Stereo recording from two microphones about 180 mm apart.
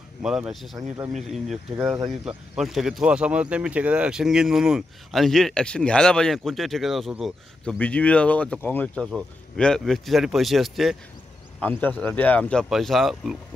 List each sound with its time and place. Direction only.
0.2 s speech: 5° right (ahead or behind)
0.7 s speech: 20° right (ahead or behind)
1.1 s speech: centre (ahead or behind)